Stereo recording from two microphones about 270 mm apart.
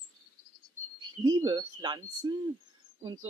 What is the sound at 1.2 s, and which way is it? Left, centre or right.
Speech, centre.